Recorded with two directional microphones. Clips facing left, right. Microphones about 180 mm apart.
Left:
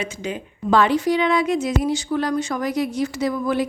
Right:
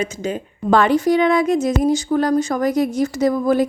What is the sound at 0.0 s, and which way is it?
A woman's voice, 45° right (ahead or behind).